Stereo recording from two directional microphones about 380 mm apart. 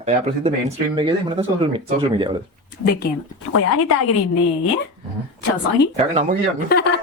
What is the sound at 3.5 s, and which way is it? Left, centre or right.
Speech, left.